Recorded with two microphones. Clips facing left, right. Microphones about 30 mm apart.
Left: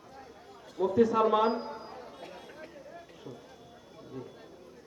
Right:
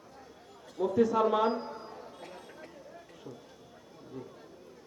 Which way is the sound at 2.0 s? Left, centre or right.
Centre.